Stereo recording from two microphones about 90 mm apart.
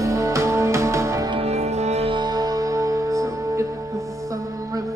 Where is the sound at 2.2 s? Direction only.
45° right (ahead or behind).